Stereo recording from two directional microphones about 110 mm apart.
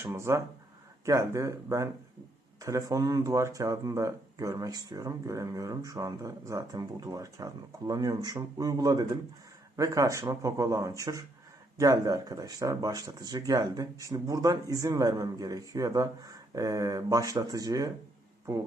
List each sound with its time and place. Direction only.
0.0 s speech: 25° right (ahead or behind)